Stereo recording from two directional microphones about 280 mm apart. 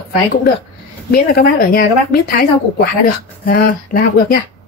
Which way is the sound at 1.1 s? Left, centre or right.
Left.